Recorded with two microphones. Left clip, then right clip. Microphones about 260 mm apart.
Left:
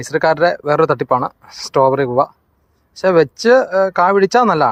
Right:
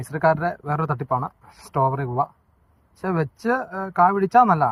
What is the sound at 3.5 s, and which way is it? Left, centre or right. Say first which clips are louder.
Speech: left 10 dB; left.